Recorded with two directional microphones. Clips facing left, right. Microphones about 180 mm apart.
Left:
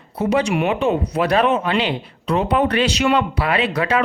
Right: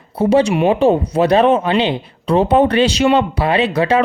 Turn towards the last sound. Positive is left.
turn(degrees=-25)  # may be behind; listen again after turning